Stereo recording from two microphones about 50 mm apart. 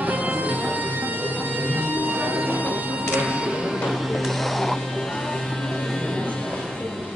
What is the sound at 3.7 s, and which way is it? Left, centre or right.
Music, centre.